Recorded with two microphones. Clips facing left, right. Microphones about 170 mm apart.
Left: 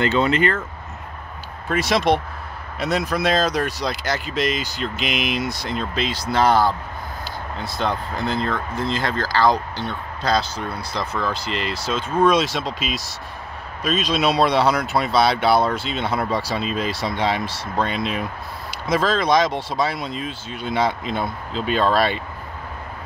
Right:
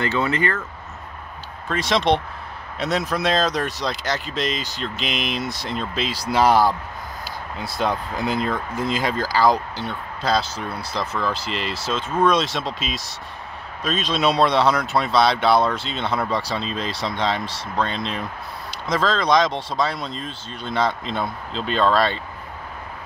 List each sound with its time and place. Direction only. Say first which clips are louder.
0.0 s speech: left 3 dB; 20° left (ahead or behind)
1.7 s speech: left 1 dB; 5° left (ahead or behind)